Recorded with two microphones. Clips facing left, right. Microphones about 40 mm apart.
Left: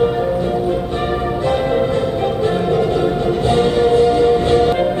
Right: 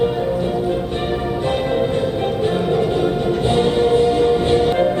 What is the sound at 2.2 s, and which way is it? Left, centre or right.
Music, right.